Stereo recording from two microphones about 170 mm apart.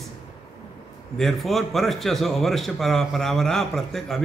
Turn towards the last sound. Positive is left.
turn(degrees=5)  # may be behind; listen again after turning